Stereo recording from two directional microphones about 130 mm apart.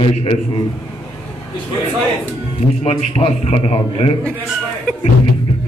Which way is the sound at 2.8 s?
55° left (ahead or behind).